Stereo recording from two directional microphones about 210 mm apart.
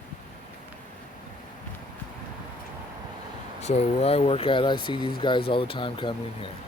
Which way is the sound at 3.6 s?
30° left (ahead or behind).